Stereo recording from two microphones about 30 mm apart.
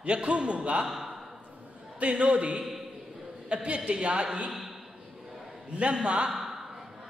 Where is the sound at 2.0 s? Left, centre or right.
Right.